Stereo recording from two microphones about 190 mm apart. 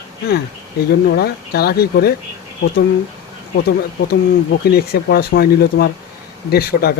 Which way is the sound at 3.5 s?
55° left (ahead or behind).